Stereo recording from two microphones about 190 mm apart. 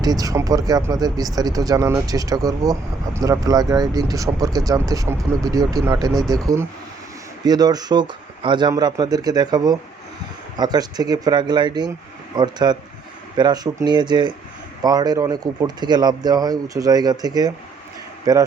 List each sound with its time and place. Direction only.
0.0 s speech: 20° right (ahead or behind)